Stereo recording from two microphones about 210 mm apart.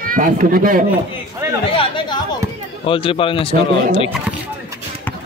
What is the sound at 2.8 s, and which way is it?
Speech, 25° left (ahead or behind).